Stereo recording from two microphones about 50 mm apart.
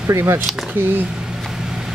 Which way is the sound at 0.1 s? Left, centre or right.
Right.